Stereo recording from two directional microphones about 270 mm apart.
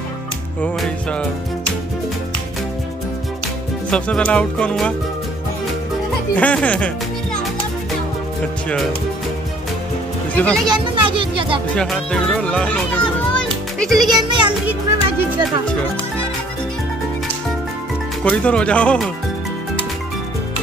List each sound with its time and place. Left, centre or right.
0.6 s speech: centre
3.9 s speech: centre
6.3 s speech: centre
10.3 s speech: centre
10.7 s a sound: centre
11.7 s speech: centre
13.3 s music: centre
14.2 s music: centre
18.2 s speech: centre